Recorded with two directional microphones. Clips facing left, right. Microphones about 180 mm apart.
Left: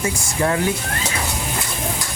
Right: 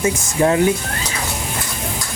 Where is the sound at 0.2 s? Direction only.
25° right (ahead or behind).